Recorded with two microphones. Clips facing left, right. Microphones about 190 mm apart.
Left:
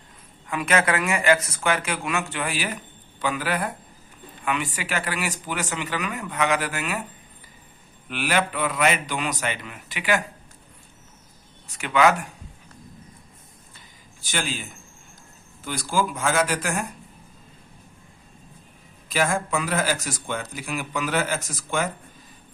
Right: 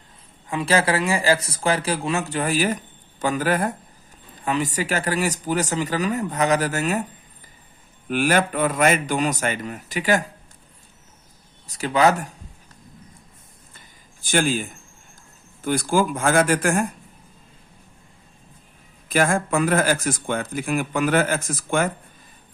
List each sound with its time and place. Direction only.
0.4 s speech: 30° right (ahead or behind)
8.0 s speech: 45° right (ahead or behind)
11.7 s speech: 35° right (ahead or behind)
13.7 s a sound: 50° right (ahead or behind)
15.6 s speech: 50° right (ahead or behind)
19.0 s speech: 50° right (ahead or behind)